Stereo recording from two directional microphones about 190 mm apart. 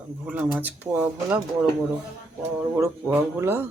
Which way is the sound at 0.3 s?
5° right (ahead or behind).